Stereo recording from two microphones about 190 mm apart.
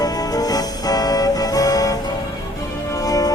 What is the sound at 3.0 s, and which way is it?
Music, 20° left (ahead or behind).